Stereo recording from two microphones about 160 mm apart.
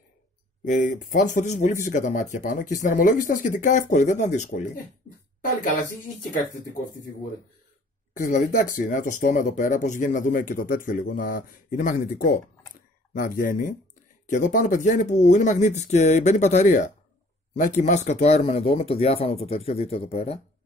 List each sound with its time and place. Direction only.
0.7 s speech: 50° left (ahead or behind)
8.1 s speech: 55° left (ahead or behind); by 20.3 s 40° left (ahead or behind)